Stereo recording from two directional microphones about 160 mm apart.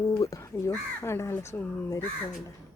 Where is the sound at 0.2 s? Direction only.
20° left (ahead or behind).